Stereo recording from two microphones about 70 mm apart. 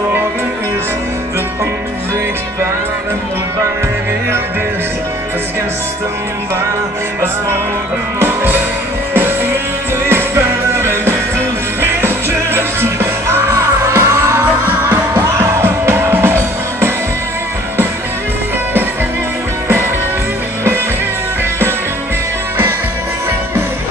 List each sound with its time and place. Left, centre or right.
8.2 s music: right
14.4 s music: right
15.2 s music: right